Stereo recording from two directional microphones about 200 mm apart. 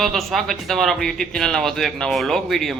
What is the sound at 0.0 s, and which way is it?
Speech, centre (ahead or behind).